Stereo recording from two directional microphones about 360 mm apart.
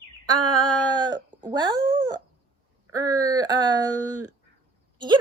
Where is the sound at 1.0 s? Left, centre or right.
Centre.